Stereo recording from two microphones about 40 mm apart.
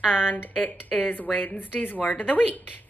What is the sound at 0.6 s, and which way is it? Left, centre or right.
A woman's voice, left.